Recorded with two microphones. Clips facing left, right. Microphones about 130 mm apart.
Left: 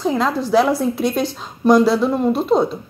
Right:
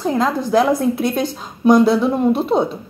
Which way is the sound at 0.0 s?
Centre (ahead or behind).